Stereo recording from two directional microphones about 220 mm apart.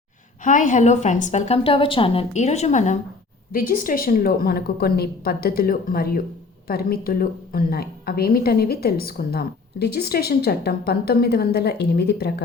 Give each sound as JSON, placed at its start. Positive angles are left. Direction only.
{"t": 0.4, "sound": "a woman's voice", "side_deg": 35}